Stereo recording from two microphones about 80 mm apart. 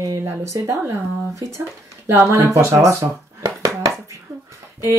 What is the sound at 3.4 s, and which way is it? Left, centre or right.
Dishes, right.